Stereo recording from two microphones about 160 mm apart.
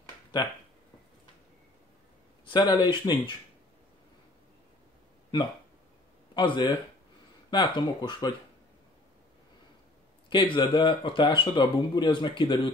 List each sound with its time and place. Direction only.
2.4 s speech: 25° left (ahead or behind)
6.3 s speech: 30° left (ahead or behind)
10.3 s speech: 30° left (ahead or behind)